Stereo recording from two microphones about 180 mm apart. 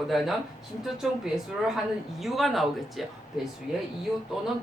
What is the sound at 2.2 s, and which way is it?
Speech, centre (ahead or behind).